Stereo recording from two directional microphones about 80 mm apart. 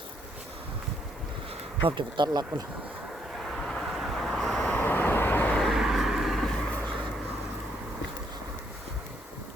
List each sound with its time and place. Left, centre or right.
1.8 s speech: right
3.7 s vehicle: centre
4.8 s vehicle: left
5.5 s vehicle: centre